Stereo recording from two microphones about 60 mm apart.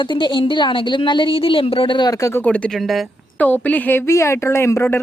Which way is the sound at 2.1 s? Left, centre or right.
Left.